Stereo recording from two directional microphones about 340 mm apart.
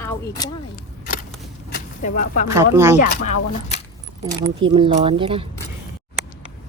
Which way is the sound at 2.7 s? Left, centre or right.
Centre.